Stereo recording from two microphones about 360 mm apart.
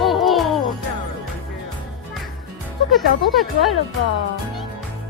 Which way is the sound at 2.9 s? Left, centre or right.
Centre.